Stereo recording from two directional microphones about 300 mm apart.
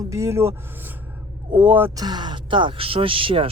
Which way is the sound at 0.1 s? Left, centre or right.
Centre.